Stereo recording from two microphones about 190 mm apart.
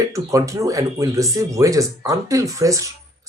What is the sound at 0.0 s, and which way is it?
Speech, 15° right (ahead or behind).